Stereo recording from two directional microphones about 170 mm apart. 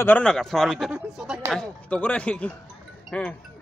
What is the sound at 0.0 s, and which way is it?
Speech, 10° left (ahead or behind).